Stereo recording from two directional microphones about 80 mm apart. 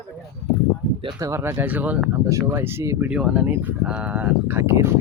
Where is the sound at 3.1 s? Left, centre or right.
Centre.